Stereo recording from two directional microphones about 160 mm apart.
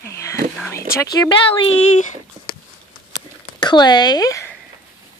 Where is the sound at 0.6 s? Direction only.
15° left (ahead or behind).